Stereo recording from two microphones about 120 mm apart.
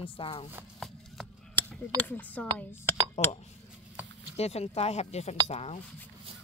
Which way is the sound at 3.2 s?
65° left (ahead or behind).